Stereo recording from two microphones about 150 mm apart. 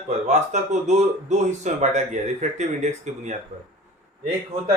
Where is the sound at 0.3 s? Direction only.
50° right (ahead or behind).